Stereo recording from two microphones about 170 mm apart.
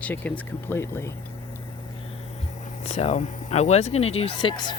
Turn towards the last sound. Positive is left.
turn(degrees=25)  # may be behind; listen again after turning